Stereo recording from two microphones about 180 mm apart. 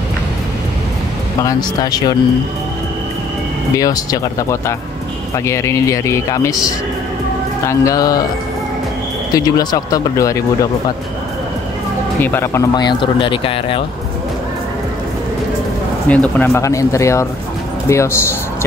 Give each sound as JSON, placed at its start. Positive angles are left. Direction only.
{"t": 1.4, "sound": "speech", "side_deg": 20}
{"t": 3.7, "sound": "speech", "side_deg": 20}
{"t": 7.6, "sound": "speech", "side_deg": 20}
{"t": 9.3, "sound": "speech", "side_deg": 20}
{"t": 12.2, "sound": "speech", "side_deg": 10}
{"t": 12.7, "sound": "speech", "side_deg": 25}
{"t": 16.1, "sound": "speech", "side_deg": 10}